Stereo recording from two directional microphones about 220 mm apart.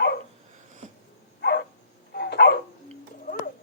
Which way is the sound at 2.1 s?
45° left (ahead or behind).